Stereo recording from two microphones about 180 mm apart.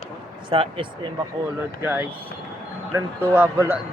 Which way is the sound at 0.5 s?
30° right (ahead or behind).